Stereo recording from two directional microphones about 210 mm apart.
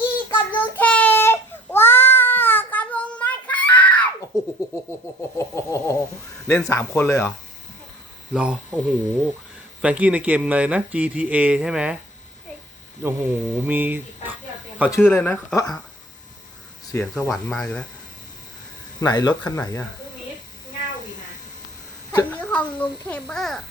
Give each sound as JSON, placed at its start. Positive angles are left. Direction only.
{"t": 0.3, "sound": "child singing", "side_deg": 10}
{"t": 4.3, "sound": "music", "side_deg": 15}
{"t": 5.4, "sound": "a sound", "side_deg": 15}
{"t": 6.5, "sound": "speech", "side_deg": 15}
{"t": 8.3, "sound": "speech", "side_deg": -5}
{"t": 13.0, "sound": "speech", "side_deg": -10}
{"t": 14.9, "sound": "speech", "side_deg": 10}
{"t": 16.9, "sound": "speech", "side_deg": 10}
{"t": 18.9, "sound": "speech", "side_deg": 20}
{"t": 22.1, "sound": "a child's voice", "side_deg": 10}